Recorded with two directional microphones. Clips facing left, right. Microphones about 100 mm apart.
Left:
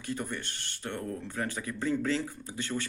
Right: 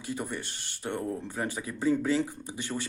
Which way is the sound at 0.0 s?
15° right (ahead or behind).